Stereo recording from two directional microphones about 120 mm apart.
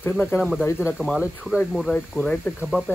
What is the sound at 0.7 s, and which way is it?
Speech, 10° right (ahead or behind).